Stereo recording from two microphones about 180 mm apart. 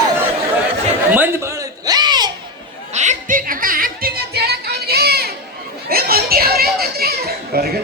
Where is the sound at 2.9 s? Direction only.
40° right (ahead or behind); by 5.3 s 60° right (ahead or behind).